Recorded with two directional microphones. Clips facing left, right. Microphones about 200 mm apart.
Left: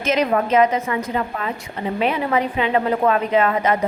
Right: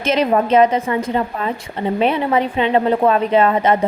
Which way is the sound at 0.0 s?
30° right (ahead or behind).